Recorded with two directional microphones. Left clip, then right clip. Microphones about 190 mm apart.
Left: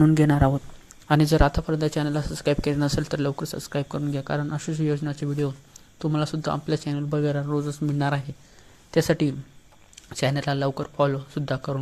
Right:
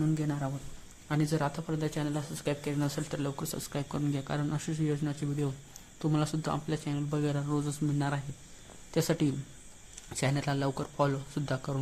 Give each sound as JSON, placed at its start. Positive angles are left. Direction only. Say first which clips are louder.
{"t": 0.0, "sound": "a man's voice", "louder": "left 14 dB", "side_deg": 45}
{"t": 7.9, "sound": "speech", "louder": "left 8 dB", "side_deg": 30}